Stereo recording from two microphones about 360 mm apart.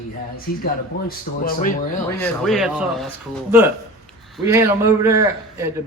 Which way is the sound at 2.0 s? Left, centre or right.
Centre.